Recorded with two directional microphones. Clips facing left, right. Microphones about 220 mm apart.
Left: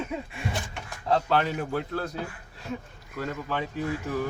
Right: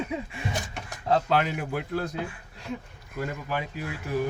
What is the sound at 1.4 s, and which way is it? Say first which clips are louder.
Speech: left 1 dB; 10° right (ahead or behind).